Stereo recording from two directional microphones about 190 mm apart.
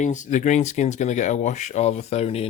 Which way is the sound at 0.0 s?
40° left (ahead or behind).